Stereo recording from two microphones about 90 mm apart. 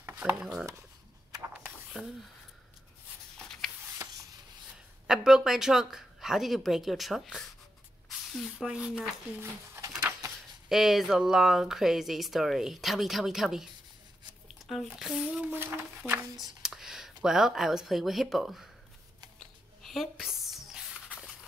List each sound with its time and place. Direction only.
0.2 s speech: 10° right (ahead or behind)
2.0 s speech: 5° right (ahead or behind)
4.0 s rub: 30° right (ahead or behind)
5.0 s speech: 5° right (ahead or behind)
9.4 s a sound: 30° right (ahead or behind)
10.7 s speech: 5° right (ahead or behind)
15.0 s speech: centre (ahead or behind)
16.3 s speech: 5° right (ahead or behind)
19.8 s a sound: centre (ahead or behind)